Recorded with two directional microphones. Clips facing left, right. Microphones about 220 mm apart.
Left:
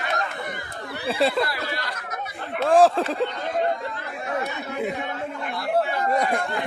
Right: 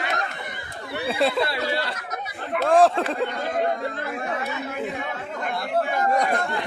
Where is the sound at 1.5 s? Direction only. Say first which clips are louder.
Right 4 dB; 25° right (ahead or behind).